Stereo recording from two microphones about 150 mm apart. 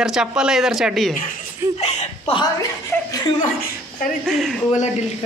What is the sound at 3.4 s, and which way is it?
Speech, 60° left (ahead or behind).